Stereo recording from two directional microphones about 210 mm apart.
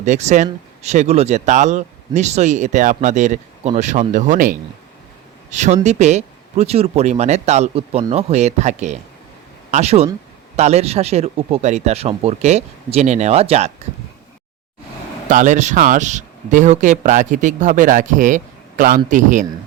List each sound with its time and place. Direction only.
0.0 s speech: 35° right (ahead or behind)
15.3 s speech: 35° right (ahead or behind)